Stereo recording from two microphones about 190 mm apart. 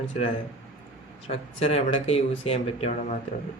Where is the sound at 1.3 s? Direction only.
30° left (ahead or behind).